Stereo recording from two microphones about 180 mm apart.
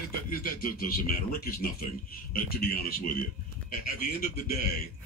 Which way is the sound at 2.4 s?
55° left (ahead or behind).